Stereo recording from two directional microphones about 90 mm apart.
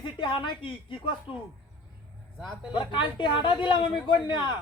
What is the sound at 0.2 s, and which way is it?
Speech, 65° left (ahead or behind).